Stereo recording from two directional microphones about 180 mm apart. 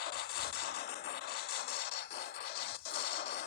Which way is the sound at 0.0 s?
60° left (ahead or behind).